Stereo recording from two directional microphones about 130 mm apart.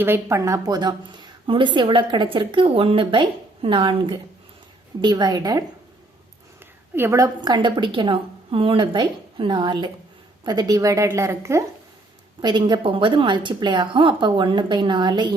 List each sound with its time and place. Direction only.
0.0 s a woman's voice: 20° right (ahead or behind)
6.9 s a woman's voice: 20° right (ahead or behind)
7.4 s a woman's voice: 35° right (ahead or behind)
12.4 s a woman's voice: 35° right (ahead or behind)